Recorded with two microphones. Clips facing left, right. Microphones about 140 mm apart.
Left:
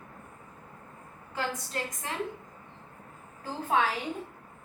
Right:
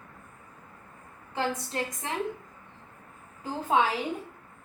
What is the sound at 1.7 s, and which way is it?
Speech, 20° right (ahead or behind).